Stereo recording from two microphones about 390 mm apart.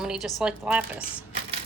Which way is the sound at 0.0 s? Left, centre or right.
Centre.